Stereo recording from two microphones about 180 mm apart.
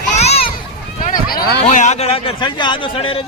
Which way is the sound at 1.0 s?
45° left (ahead or behind).